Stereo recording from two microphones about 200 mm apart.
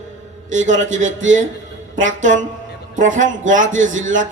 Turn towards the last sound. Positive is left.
turn(degrees=-40)  # may be behind; listen again after turning